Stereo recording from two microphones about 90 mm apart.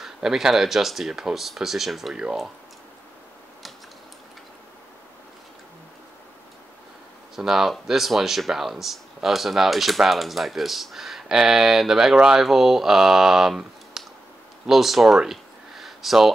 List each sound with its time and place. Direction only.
0.0 s speech: 5° right (ahead or behind)
7.3 s speech: 5° right (ahead or behind)